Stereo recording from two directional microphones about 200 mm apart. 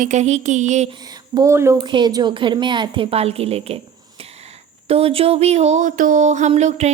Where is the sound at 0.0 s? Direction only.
35° right (ahead or behind).